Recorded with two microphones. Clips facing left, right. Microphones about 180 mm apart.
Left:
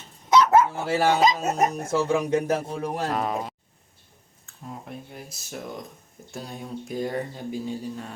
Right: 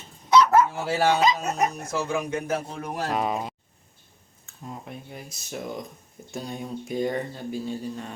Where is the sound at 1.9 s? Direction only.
35° left (ahead or behind).